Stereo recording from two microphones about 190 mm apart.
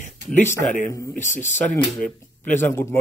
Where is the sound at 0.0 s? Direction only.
40° left (ahead or behind).